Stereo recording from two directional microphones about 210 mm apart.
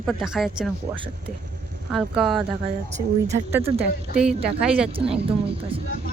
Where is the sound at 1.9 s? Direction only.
Centre (ahead or behind).